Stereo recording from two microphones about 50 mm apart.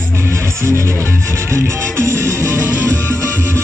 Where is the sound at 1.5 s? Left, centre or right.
Right.